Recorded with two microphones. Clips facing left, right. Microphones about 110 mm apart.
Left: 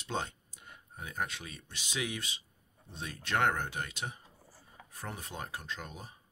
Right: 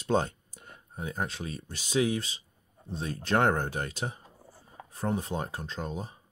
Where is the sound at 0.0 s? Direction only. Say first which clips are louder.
Right 9 dB; 45° right (ahead or behind).